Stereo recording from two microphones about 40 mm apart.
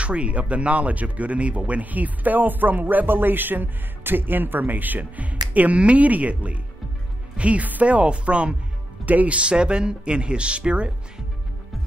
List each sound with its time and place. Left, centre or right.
0.0 s speech: right
9.0 s speech: right
9.4 s speech: right